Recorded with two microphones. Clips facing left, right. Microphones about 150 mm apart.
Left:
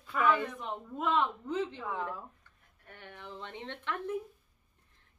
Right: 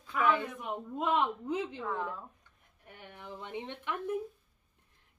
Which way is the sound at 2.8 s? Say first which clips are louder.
Right 1 dB; 15° right (ahead or behind).